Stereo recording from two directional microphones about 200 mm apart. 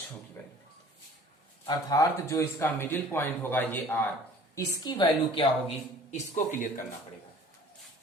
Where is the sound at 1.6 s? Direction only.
15° left (ahead or behind).